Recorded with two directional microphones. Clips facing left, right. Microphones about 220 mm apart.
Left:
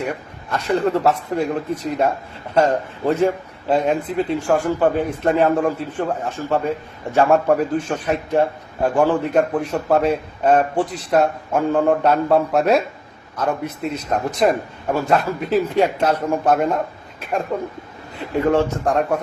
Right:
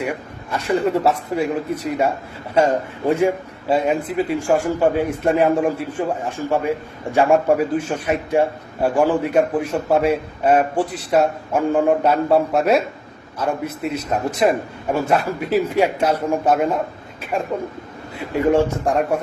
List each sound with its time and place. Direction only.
0.5 s a man's voice: 10° right (ahead or behind)
18.5 s a man's voice: 10° right (ahead or behind)